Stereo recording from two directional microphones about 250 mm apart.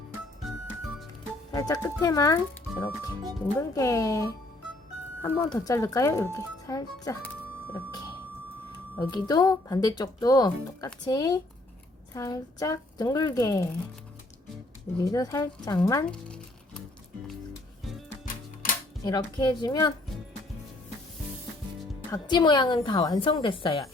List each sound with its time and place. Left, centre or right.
1.5 s speech: centre
9.0 s speech: centre
15.0 s speech: centre
19.0 s speech: centre
22.1 s a woman's voice: centre